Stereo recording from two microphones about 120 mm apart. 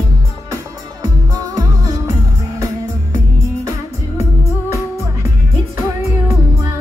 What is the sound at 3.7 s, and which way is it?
Music, 25° right (ahead or behind).